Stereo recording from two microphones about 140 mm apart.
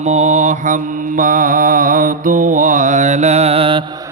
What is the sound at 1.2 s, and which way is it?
Mantra, 75° right (ahead or behind).